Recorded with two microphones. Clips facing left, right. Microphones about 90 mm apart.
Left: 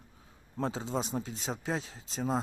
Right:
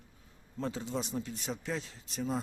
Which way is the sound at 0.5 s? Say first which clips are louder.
Left 3 dB; 75° left (ahead or behind).